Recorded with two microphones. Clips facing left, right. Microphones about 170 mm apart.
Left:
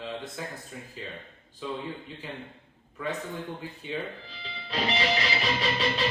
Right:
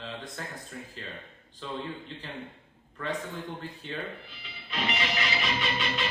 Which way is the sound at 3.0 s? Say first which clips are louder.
Left 1 dB; 10° left (ahead or behind).